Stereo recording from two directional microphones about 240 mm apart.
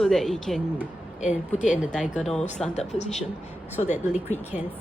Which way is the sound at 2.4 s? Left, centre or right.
Left.